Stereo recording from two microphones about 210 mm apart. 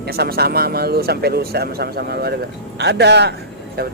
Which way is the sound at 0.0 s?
50° right (ahead or behind).